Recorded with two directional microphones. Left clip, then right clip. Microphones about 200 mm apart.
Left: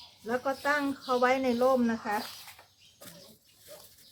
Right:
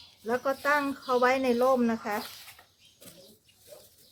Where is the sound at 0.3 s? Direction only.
40° right (ahead or behind).